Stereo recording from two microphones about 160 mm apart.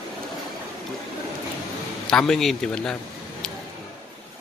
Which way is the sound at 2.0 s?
5° left (ahead or behind).